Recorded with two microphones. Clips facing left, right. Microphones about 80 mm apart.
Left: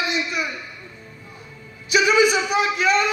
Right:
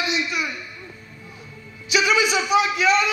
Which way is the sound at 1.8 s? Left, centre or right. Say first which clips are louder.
Left 3 dB; left.